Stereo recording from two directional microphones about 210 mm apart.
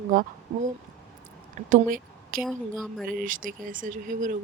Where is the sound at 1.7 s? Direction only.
40° right (ahead or behind).